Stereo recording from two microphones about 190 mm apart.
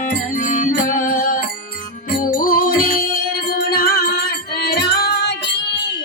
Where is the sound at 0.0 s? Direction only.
40° left (ahead or behind).